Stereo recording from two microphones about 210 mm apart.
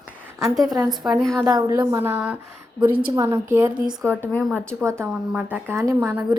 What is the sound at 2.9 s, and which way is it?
Speech, 45° right (ahead or behind).